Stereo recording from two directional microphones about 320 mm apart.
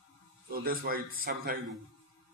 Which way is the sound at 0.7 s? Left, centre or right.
Right.